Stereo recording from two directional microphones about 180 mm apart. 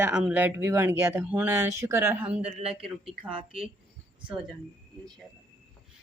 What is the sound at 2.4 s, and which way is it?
Speech, 35° right (ahead or behind).